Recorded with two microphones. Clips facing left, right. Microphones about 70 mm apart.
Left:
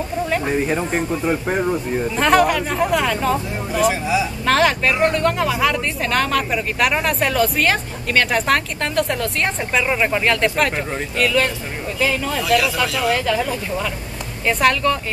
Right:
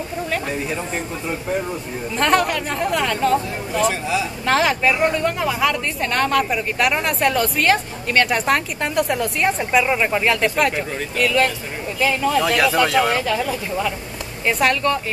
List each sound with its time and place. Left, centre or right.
0.7 s speech: left
2.1 s speech: centre
12.4 s speech: right
13.1 s speech: centre